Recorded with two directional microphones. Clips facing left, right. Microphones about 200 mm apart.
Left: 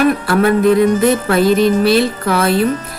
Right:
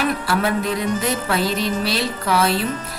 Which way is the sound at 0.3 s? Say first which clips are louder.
Left 9 dB; 55° left (ahead or behind).